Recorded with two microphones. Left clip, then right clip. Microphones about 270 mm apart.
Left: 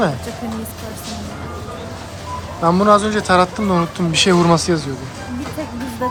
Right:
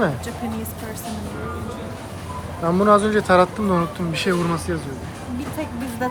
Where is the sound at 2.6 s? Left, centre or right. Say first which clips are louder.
Left 3 dB; centre.